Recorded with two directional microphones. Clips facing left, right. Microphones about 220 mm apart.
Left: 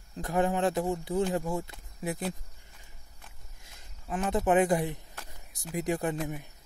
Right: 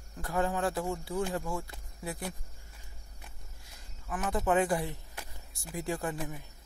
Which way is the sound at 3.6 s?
25° left (ahead or behind).